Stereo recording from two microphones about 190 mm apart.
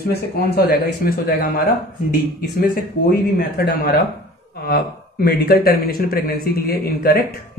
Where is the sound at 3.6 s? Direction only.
50° left (ahead or behind).